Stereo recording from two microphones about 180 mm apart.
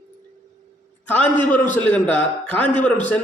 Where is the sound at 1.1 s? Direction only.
10° left (ahead or behind).